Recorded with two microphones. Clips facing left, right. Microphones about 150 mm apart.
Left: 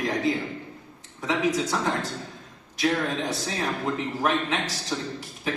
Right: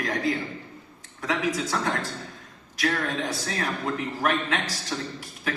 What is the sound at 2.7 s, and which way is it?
A man's voice, 20° left (ahead or behind).